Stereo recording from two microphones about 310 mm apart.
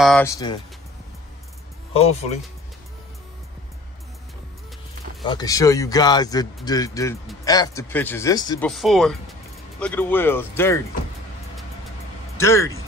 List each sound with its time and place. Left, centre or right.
0.0 s speech: centre
2.0 s speech: left
5.2 s speech: centre
12.4 s speech: centre